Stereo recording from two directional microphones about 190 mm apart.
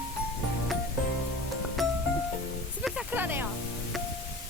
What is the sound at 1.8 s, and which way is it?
Music, centre (ahead or behind).